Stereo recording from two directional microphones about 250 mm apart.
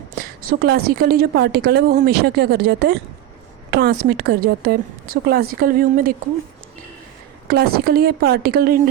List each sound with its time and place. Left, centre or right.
0.2 s a woman's voice: right
7.4 s a woman's voice: right